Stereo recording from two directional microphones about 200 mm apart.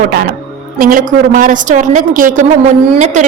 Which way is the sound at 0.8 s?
45° right (ahead or behind).